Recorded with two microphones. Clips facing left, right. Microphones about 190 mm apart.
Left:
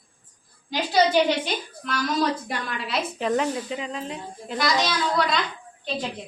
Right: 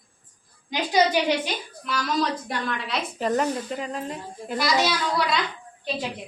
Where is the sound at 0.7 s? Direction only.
15° right (ahead or behind).